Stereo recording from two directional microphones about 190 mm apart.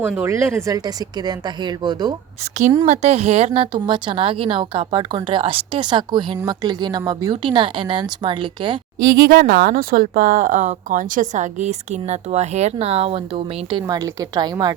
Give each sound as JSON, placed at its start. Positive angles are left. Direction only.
{"t": 0.0, "sound": "a woman's voice", "side_deg": -10}
{"t": 2.8, "sound": "a woman's voice", "side_deg": -35}
{"t": 9.1, "sound": "speech", "side_deg": -55}